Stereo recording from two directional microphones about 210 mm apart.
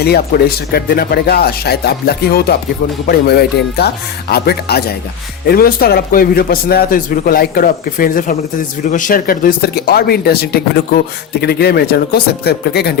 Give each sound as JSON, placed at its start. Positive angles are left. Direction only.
{"t": 0.0, "sound": "speech", "side_deg": 50}